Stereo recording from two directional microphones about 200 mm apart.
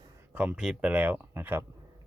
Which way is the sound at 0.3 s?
5° right (ahead or behind).